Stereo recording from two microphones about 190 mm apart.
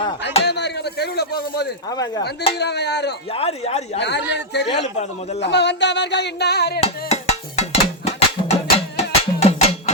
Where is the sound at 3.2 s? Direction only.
30° left (ahead or behind).